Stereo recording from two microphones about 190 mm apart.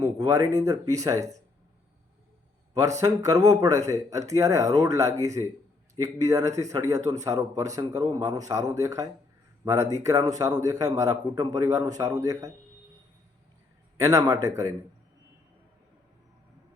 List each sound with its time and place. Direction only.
0.0 s a man's voice: 20° right (ahead or behind)
3.0 s a man's voice: 20° right (ahead or behind)
13.9 s a man's voice: 15° right (ahead or behind)